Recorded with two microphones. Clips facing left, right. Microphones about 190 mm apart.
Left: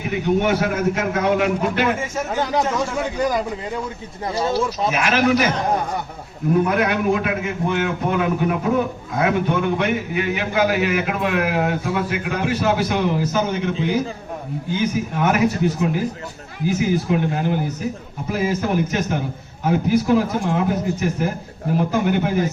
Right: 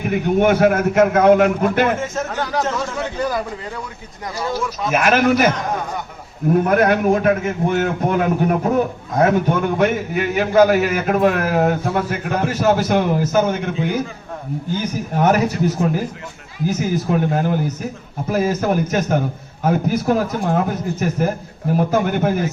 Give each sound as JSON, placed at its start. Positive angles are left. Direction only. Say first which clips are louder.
{"t": 0.1, "sound": "a man's voice", "louder": "right 3 dB", "side_deg": -50}
{"t": 2.4, "sound": "a man's voice", "louder": "left 2 dB", "side_deg": 15}
{"t": 4.4, "sound": "speech", "louder": "left 2 dB", "side_deg": 25}
{"t": 4.9, "sound": "a man's voice", "louder": "right 5 dB", "side_deg": -50}
{"t": 6.7, "sound": "a man's voice", "louder": "right 4 dB", "side_deg": -45}
{"t": 14.8, "sound": "a man's voice", "louder": "even", "side_deg": -40}